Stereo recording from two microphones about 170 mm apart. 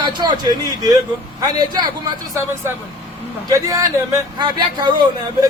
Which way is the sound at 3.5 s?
20° right (ahead or behind).